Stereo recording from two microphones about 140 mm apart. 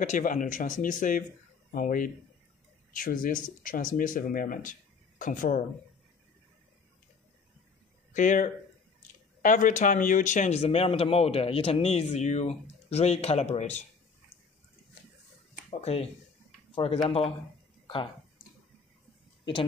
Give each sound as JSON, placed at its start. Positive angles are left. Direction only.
{"t": 0.0, "sound": "speech", "side_deg": 65}
{"t": 8.1, "sound": "speech", "side_deg": 65}
{"t": 15.7, "sound": "speech", "side_deg": 45}